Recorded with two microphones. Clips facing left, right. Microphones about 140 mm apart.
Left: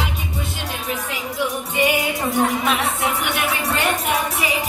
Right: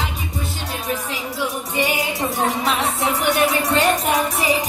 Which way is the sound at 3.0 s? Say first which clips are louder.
Right 4 dB; 35° right (ahead or behind).